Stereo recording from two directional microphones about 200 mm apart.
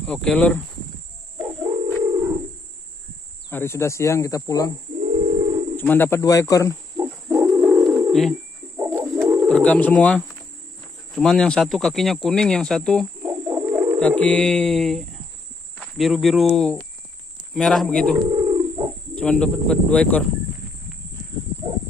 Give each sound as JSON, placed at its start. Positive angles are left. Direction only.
{"t": 0.0, "sound": "speech", "side_deg": 5}
{"t": 1.4, "sound": "bird", "side_deg": -5}
{"t": 3.4, "sound": "speech", "side_deg": 10}
{"t": 5.0, "sound": "a sound", "side_deg": -30}
{"t": 5.8, "sound": "speech", "side_deg": 10}
{"t": 7.4, "sound": "bird", "side_deg": -5}
{"t": 8.7, "sound": "bird", "side_deg": -15}
{"t": 9.5, "sound": "speech", "side_deg": 5}
{"t": 13.2, "sound": "bird", "side_deg": -5}
{"t": 13.9, "sound": "speech", "side_deg": 5}
{"t": 18.3, "sound": "bird", "side_deg": -15}
{"t": 19.1, "sound": "speech", "side_deg": 5}